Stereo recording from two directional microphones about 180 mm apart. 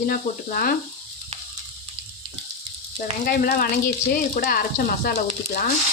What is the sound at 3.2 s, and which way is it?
Speech, 55° left (ahead or behind).